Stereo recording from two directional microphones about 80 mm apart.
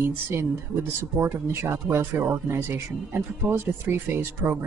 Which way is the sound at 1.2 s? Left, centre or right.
Right.